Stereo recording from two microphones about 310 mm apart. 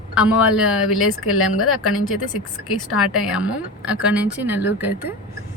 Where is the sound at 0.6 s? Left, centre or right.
Left.